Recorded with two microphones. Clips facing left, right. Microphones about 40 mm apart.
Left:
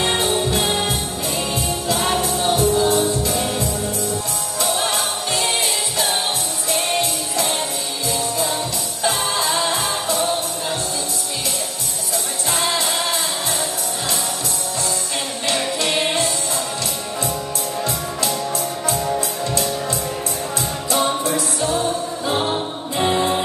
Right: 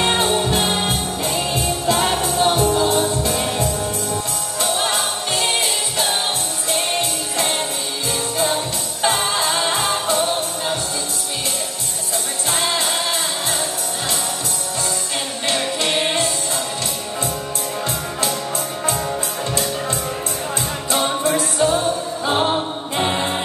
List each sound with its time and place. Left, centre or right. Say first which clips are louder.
0.0 s music: right 1 dB; right
4.6 s music: right 1 dB; right
9.0 s music: right 2 dB; right
15.8 s music: right 1 dB; right
19.5 s music: even; right
21.2 s music: right 3 dB; right